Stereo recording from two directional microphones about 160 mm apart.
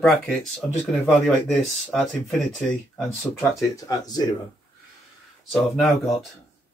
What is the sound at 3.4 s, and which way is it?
Speech, 20° left (ahead or behind).